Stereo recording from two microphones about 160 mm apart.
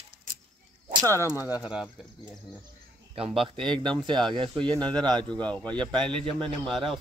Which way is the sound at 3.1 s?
35° right (ahead or behind).